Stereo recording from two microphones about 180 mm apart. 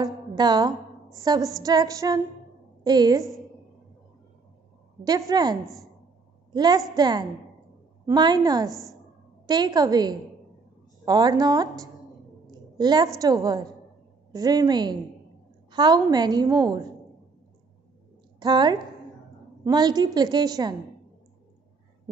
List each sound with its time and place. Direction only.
0.0 s a woman's voice: 20° right (ahead or behind)
5.3 s a woman's voice: 25° right (ahead or behind)
8.6 s a woman's voice: centre (ahead or behind)
9.5 s a woman's voice: 20° right (ahead or behind)
12.4 s a sound: 25° right (ahead or behind)
13.2 s a woman's voice: 20° right (ahead or behind)
18.4 s a woman's voice: 25° right (ahead or behind)